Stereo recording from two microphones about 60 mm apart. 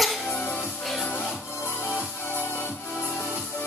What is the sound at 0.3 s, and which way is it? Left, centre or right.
Music, left.